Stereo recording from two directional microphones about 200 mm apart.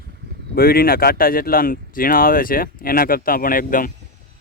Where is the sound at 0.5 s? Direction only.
50° left (ahead or behind).